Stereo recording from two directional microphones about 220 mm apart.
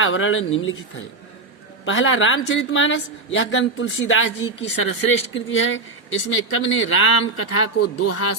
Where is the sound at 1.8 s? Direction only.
60° left (ahead or behind).